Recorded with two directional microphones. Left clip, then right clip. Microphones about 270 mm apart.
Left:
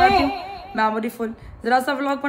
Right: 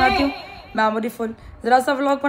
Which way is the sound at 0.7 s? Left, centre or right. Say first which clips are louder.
Right 2 dB; centre.